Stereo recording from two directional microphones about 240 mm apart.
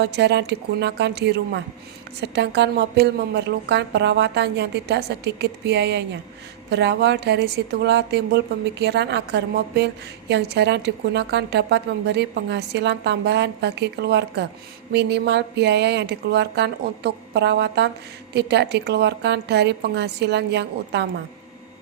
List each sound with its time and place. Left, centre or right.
0.0 s a woman's voice: right